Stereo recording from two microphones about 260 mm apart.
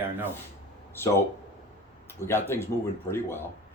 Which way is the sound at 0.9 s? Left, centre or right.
Centre.